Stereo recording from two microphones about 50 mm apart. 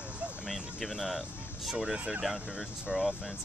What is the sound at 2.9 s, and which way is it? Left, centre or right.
Speech, centre.